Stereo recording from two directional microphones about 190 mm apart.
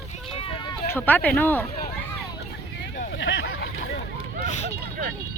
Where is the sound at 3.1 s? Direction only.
80° left.